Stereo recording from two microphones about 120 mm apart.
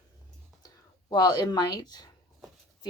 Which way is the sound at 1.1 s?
35° left (ahead or behind).